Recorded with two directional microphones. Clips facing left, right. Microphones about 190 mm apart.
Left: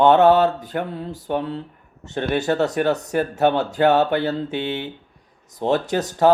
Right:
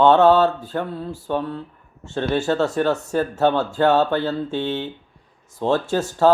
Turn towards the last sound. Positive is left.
turn(degrees=20)  # may be behind; listen again after turning